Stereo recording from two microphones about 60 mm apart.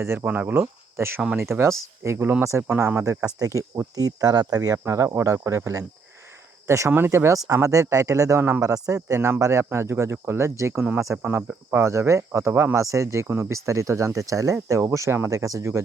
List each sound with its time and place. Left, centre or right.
0.3 s speech: right
2.6 s speech: right
3.3 s speech: right
4.9 s speech: right
6.9 s speech: right
7.4 s speech: right
8.4 s speech: right
8.6 s speech: right
9.4 s speech: right